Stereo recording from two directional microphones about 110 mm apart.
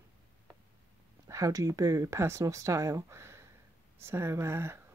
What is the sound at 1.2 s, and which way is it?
Speech, 30° right (ahead or behind).